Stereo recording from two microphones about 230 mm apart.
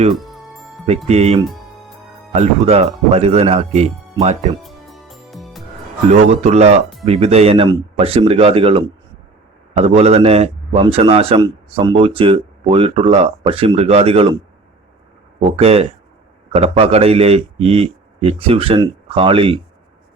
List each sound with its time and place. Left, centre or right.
0.1 s music: centre
1.0 s a man's voice: right
4.6 s music: centre
6.1 s a man's voice: right
15.4 s a man's voice: right